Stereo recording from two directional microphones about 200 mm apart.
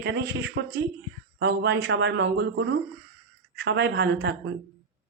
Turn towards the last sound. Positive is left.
turn(degrees=-60)  # may be behind; listen again after turning